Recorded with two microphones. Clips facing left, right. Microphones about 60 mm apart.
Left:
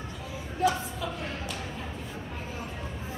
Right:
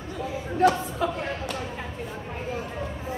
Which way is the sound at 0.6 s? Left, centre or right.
Right.